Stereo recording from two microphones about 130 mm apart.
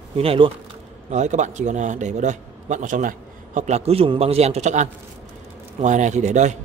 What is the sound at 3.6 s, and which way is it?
A man's voice, 60° right (ahead or behind).